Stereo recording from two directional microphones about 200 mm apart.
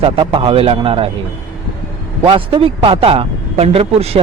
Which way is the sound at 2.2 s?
25° right (ahead or behind).